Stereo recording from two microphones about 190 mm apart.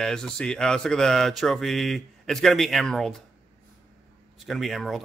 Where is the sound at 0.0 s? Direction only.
5° left (ahead or behind).